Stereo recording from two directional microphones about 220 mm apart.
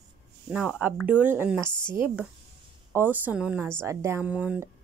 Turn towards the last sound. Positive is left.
turn(degrees=-5)  # may be behind; listen again after turning